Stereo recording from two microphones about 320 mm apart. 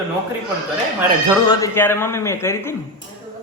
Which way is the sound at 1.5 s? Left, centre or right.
Centre.